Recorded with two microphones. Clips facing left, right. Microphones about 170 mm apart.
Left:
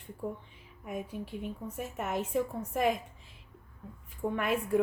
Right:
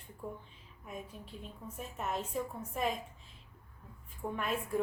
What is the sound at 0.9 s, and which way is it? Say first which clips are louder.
A woman's voice: left 8 dB; 70° left (ahead or behind).